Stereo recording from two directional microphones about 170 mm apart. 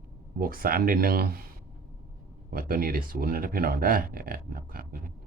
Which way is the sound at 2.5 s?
60° right (ahead or behind).